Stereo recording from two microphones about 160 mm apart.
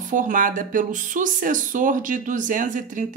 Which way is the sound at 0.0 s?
55° right (ahead or behind).